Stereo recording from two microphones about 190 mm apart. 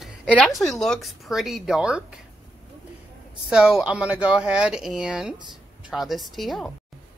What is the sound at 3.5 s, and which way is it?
Speech, 5° right (ahead or behind).